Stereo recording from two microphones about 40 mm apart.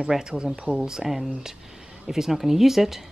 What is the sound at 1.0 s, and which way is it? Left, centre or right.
A woman's voice, centre.